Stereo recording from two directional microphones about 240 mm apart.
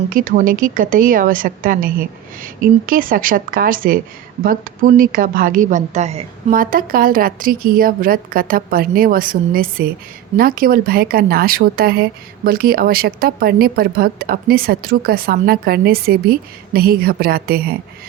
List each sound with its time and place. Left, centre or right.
0.1 s a woman's voice: right